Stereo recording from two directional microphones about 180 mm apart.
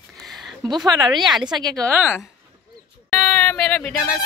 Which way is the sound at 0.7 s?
25° right (ahead or behind).